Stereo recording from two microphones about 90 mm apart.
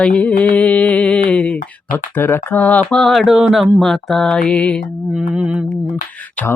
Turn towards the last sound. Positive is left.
turn(degrees=-15)  # may be behind; listen again after turning